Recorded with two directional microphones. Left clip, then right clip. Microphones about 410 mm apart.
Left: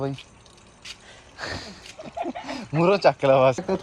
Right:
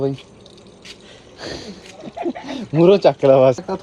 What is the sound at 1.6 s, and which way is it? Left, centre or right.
Speech, centre.